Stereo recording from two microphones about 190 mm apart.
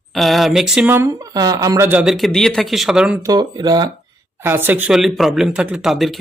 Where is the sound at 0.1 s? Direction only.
Centre (ahead or behind).